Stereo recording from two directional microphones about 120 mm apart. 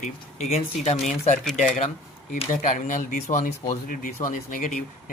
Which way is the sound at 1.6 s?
90° left.